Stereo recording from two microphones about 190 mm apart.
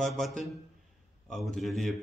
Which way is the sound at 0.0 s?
Centre (ahead or behind).